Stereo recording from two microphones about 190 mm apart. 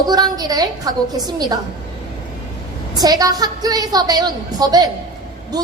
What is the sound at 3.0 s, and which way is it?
A woman's voice, 20° right (ahead or behind).